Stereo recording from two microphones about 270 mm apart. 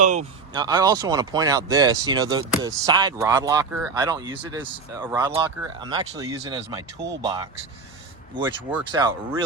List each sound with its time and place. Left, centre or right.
0.0 s speech: right
0.5 s speech: centre
8.9 s speech: centre